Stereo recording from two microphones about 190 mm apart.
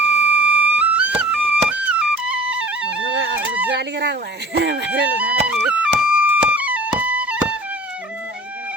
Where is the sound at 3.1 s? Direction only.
75° right (ahead or behind).